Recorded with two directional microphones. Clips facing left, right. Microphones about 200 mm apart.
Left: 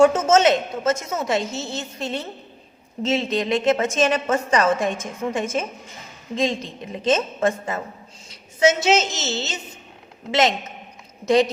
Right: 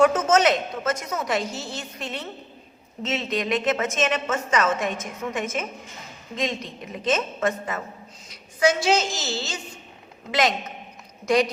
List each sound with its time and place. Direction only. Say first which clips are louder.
0.0 s a woman's voice: left 3 dB; 25° left (ahead or behind)